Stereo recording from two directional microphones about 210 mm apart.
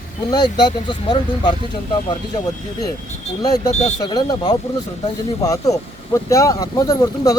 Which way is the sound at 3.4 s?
20° left (ahead or behind).